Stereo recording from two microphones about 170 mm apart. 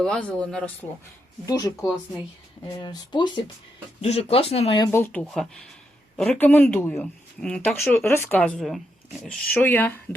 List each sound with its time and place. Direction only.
0.0 s speech: 5° left (ahead or behind)
1.5 s speech: 20° left (ahead or behind)
4.8 s speech: 15° left (ahead or behind)